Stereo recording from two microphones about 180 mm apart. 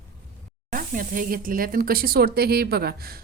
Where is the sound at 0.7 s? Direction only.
50° right (ahead or behind).